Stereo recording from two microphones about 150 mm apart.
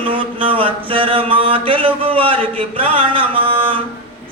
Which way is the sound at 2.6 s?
40° right (ahead or behind).